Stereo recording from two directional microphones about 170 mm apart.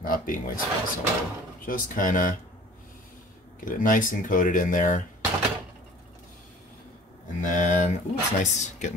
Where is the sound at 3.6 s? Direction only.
55° left (ahead or behind).